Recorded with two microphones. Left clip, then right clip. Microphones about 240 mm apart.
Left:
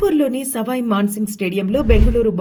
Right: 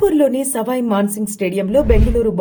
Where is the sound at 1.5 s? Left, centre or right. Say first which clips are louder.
Left 1 dB; centre.